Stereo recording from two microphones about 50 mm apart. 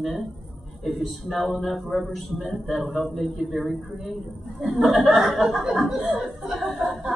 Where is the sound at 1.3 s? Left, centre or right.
Centre.